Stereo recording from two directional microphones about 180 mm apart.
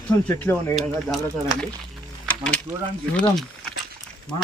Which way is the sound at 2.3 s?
5° left (ahead or behind).